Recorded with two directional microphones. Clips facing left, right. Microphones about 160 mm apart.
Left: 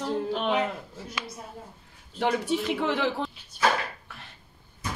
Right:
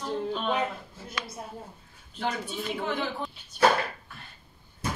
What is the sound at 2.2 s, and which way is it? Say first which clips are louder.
Speech: left 6 dB; 75° left (ahead or behind).